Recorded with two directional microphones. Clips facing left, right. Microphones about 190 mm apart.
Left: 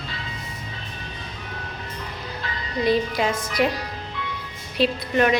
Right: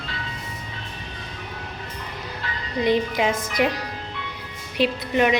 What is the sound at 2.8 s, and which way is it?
Speech, 15° right (ahead or behind).